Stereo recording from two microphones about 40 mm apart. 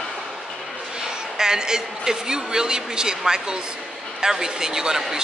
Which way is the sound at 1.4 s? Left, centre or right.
Centre.